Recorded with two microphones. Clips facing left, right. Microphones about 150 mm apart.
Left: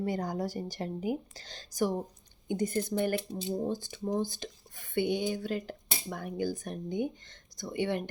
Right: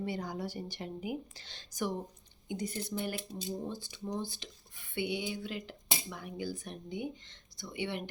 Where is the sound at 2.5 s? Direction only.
50° left (ahead or behind).